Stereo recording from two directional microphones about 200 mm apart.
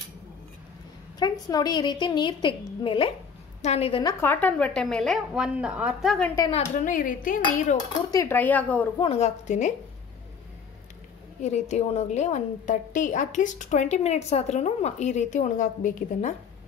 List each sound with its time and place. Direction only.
1.2 s a woman's voice: 20° left (ahead or behind)
4.0 s a woman's voice: 15° left (ahead or behind)
6.7 s a woman's voice: 40° left (ahead or behind)
8.1 s speech: 15° left (ahead or behind)
9.0 s a woman's voice: 30° left (ahead or behind)
11.4 s a woman's voice: 35° left (ahead or behind)